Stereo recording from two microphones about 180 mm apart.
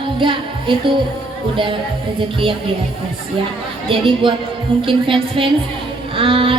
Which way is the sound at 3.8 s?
30° right (ahead or behind).